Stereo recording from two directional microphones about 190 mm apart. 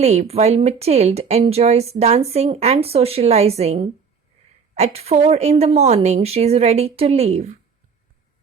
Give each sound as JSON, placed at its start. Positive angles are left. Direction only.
{"t": 0.0, "sound": "speech", "side_deg": -35}